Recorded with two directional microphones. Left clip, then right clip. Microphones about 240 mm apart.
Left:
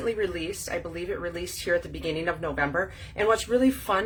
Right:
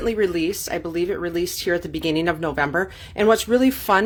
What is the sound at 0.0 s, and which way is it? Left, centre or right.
Speech, right.